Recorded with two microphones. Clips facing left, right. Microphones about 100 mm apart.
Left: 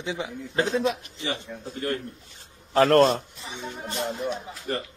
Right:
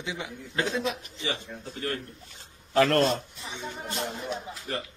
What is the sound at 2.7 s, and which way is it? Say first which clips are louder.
Speech: left 4 dB; 40° left (ahead or behind).